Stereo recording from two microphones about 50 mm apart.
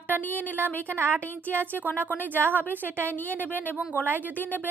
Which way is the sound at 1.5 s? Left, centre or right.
Right.